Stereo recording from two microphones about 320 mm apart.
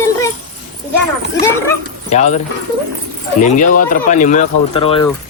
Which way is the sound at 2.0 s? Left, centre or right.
Left.